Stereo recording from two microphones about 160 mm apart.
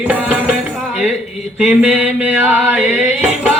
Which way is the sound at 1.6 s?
5° right (ahead or behind).